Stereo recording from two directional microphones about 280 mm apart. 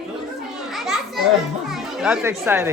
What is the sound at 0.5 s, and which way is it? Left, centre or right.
Children playing, centre.